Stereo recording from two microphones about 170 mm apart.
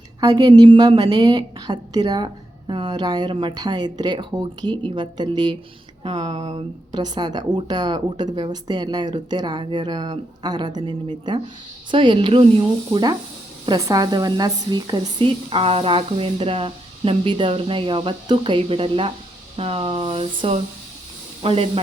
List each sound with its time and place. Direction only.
0.2 s a woman's voice: 20° right (ahead or behind)